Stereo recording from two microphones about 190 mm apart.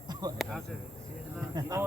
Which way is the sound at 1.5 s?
20° right (ahead or behind).